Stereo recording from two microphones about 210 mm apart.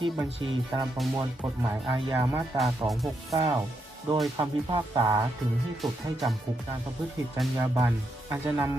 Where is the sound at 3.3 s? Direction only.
20° right (ahead or behind).